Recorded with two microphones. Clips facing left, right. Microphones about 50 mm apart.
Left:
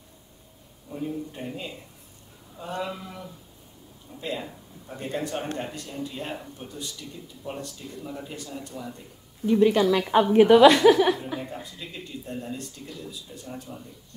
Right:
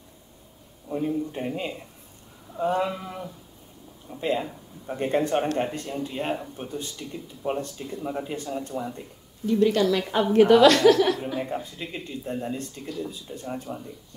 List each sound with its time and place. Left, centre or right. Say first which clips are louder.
0.8 s speech: right 5 dB; right
9.5 s a woman's voice: left 1 dB; centre
11.3 s a woman's voice: right 5 dB; centre
11.6 s speech: right 4 dB; right